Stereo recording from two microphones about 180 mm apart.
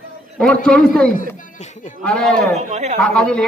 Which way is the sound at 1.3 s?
45° left (ahead or behind).